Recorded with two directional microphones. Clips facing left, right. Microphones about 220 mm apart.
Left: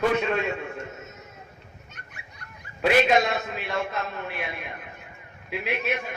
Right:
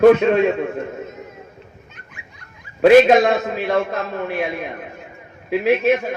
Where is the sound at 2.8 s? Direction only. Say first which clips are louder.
Right 10 dB; 50° right (ahead or behind).